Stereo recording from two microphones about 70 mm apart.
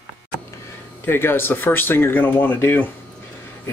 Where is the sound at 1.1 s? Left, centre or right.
Left.